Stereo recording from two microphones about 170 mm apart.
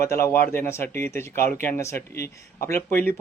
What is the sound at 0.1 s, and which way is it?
A man's voice, 15° left (ahead or behind).